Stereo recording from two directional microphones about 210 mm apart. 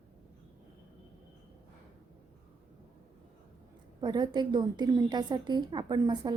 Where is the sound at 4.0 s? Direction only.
20° right (ahead or behind).